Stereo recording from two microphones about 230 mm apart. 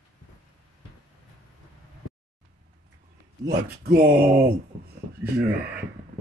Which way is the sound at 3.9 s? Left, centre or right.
Right.